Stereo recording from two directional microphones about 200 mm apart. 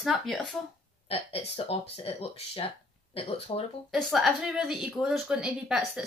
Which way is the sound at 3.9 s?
Centre (ahead or behind).